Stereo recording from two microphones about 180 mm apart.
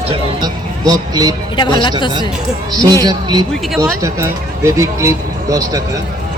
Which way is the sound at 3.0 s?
20° right (ahead or behind).